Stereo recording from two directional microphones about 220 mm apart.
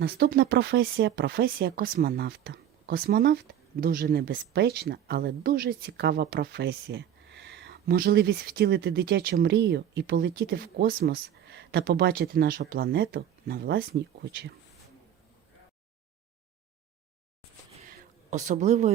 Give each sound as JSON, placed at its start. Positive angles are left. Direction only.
{"t": 0.0, "sound": "speech", "side_deg": -45}
{"t": 18.3, "sound": "speech", "side_deg": -35}